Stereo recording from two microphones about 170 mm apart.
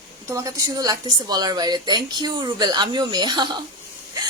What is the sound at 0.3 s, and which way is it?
A woman's voice, 20° right (ahead or behind).